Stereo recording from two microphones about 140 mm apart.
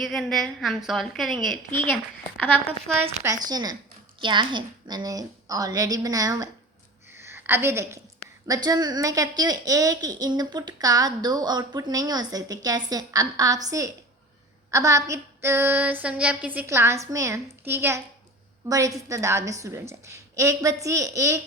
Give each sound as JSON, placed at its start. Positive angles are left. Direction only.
{"t": 0.0, "sound": "a woman's voice", "side_deg": 0}
{"t": 3.2, "sound": "a woman's voice", "side_deg": -30}
{"t": 7.1, "sound": "a sound", "side_deg": -15}
{"t": 8.4, "sound": "a woman's voice", "side_deg": -25}
{"t": 14.7, "sound": "a sound", "side_deg": -25}
{"t": 18.7, "sound": "a woman's voice", "side_deg": -25}